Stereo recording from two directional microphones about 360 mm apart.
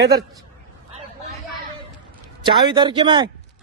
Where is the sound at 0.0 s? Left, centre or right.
Right.